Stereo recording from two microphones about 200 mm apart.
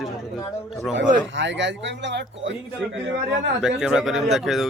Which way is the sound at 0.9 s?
65° right (ahead or behind).